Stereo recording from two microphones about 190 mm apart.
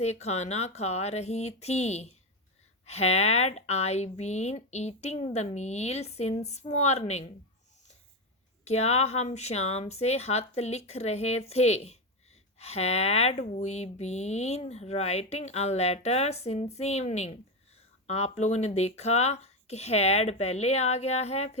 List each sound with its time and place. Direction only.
0.0 s speech: 35° left (ahead or behind)
8.6 s speech: 35° left (ahead or behind)